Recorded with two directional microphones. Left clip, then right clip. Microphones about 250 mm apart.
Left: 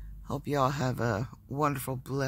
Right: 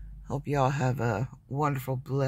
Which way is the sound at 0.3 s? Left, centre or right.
Centre.